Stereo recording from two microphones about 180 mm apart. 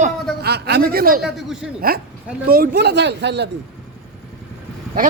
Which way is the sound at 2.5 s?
55° right (ahead or behind).